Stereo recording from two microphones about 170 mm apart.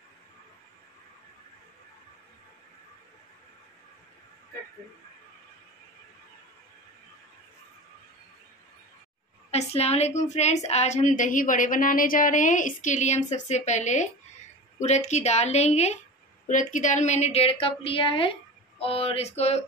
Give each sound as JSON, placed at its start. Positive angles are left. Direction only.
{"t": 9.5, "sound": "a woman's voice", "side_deg": 40}